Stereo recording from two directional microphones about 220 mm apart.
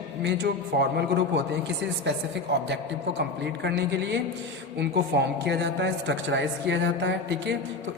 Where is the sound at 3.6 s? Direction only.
50° right (ahead or behind).